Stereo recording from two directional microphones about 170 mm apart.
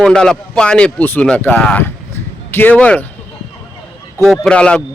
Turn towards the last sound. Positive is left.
turn(degrees=5)  # may be behind; listen again after turning